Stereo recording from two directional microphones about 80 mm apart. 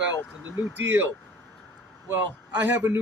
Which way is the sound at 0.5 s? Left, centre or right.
Right.